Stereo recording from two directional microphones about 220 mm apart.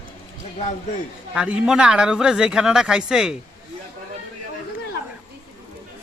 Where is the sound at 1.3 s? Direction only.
5° right (ahead or behind).